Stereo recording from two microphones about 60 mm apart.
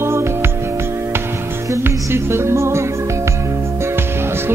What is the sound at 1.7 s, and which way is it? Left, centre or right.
Music, right.